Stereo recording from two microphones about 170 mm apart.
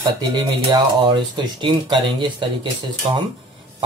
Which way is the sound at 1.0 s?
25° right (ahead or behind).